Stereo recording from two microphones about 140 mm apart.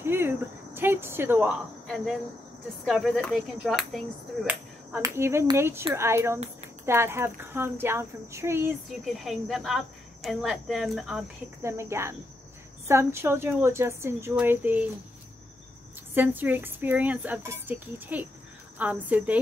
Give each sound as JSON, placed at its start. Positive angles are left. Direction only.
{"t": 0.0, "sound": "speech", "side_deg": -15}
{"t": 2.8, "sound": "cricket", "side_deg": 0}
{"t": 5.0, "sound": "a woman's voice", "side_deg": -20}
{"t": 9.2, "sound": "cricket", "side_deg": 0}
{"t": 11.6, "sound": "a woman's voice", "side_deg": -20}
{"t": 16.2, "sound": "speech", "side_deg": -15}